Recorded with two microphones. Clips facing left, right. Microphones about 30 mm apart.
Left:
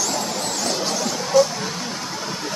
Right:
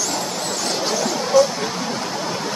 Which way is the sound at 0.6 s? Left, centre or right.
Centre.